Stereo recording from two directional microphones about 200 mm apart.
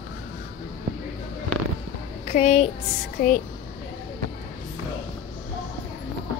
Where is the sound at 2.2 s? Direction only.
35° left (ahead or behind).